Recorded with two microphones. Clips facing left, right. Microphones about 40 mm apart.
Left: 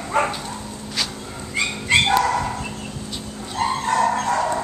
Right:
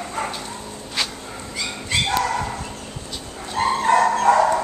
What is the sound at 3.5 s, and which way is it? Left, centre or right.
Dog, right.